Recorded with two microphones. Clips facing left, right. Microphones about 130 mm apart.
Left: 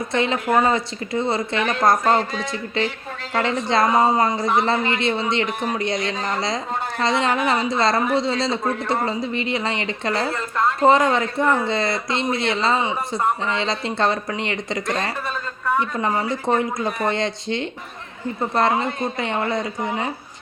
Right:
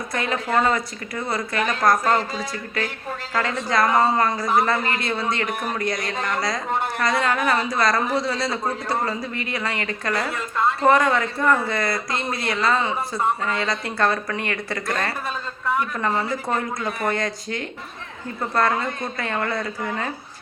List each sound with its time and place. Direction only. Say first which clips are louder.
0.1 s speech: left 3 dB; 25° left (ahead or behind)